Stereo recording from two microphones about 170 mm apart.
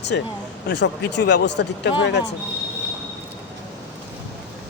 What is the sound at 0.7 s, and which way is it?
Speech, 90° left.